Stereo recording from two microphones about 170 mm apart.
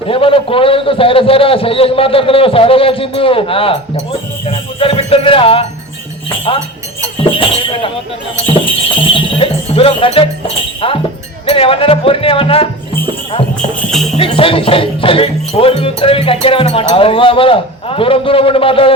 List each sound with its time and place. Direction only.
0.1 s a man's voice: 30° left (ahead or behind)
7.3 s a man's voice: 30° left (ahead or behind)
14.2 s a man's voice: 30° left (ahead or behind)